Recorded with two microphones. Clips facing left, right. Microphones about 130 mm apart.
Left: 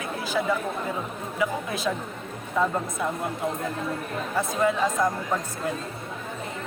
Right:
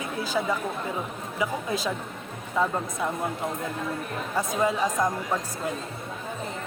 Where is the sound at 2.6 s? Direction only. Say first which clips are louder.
Left 1 dB; 15° right (ahead or behind).